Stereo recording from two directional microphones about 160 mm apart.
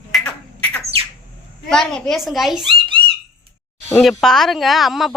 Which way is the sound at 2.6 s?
30° right (ahead or behind).